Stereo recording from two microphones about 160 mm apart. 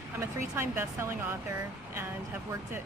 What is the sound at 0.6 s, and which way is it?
Speech, 15° right (ahead or behind).